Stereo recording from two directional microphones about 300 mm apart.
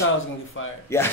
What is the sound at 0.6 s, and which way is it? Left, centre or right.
Speech, left.